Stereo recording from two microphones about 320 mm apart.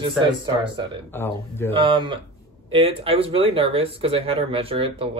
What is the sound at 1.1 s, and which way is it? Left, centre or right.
Speech, centre.